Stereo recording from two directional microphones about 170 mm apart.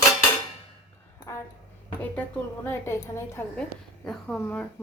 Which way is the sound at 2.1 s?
10° left (ahead or behind).